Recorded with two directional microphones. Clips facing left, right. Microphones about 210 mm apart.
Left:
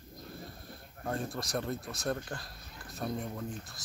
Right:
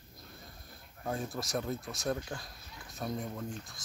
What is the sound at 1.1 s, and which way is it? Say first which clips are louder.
Speech: even; centre (ahead or behind).